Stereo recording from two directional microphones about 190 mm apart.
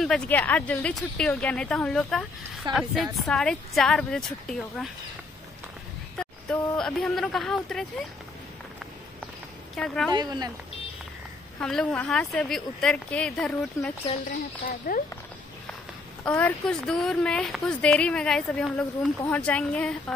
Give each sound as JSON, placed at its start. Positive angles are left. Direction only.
{"t": 0.0, "sound": "a woman's voice", "side_deg": 5}
{"t": 6.1, "sound": "a woman's voice", "side_deg": 5}
{"t": 9.8, "sound": "a woman's voice", "side_deg": 5}
{"t": 10.1, "sound": "speech", "side_deg": -20}
{"t": 11.6, "sound": "a woman's voice", "side_deg": 5}
{"t": 14.9, "sound": "speech", "side_deg": 50}
{"t": 16.3, "sound": "a woman's voice", "side_deg": 10}